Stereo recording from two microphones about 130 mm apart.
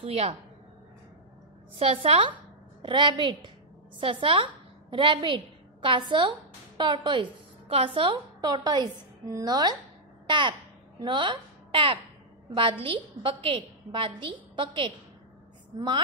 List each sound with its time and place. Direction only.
0.0 s a woman's voice: 50° right (ahead or behind)
1.8 s a woman's voice: 45° right (ahead or behind)